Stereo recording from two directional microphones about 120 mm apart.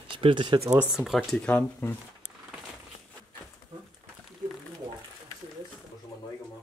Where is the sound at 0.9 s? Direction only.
5° right (ahead or behind).